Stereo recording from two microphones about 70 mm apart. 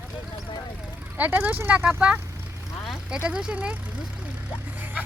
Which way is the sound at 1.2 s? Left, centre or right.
Right.